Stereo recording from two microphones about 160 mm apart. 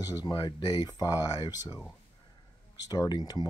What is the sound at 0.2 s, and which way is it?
Speech, 25° left (ahead or behind).